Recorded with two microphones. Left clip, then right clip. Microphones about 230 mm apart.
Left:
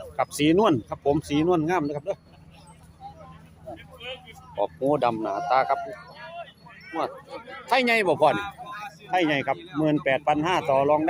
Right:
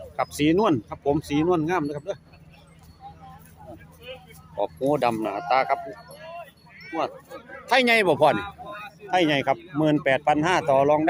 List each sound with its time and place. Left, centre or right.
0.2 s speech: centre
4.1 s vehicle: left
4.5 s speech: centre
7.7 s speech: centre
8.4 s a sound: left
9.0 s speech: centre